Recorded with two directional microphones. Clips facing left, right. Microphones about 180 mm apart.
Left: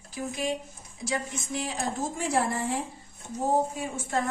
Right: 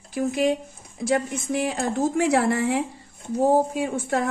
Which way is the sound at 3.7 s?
70° right (ahead or behind).